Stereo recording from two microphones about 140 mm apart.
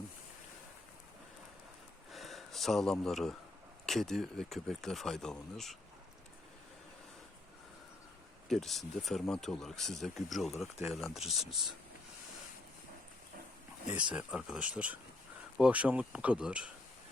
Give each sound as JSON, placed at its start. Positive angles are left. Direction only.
{"t": 2.1, "sound": "a sound", "side_deg": 0}
{"t": 3.8, "sound": "speech", "side_deg": 0}
{"t": 8.4, "sound": "speech", "side_deg": 0}
{"t": 13.9, "sound": "speech", "side_deg": -10}